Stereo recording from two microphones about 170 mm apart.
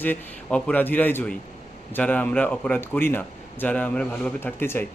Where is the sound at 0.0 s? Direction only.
10° left (ahead or behind).